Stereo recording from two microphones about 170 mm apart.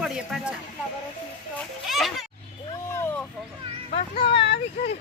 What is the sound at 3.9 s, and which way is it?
Speech, 35° left (ahead or behind).